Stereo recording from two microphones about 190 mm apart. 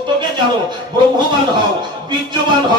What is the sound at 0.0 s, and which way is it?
A man's voice, 25° right (ahead or behind).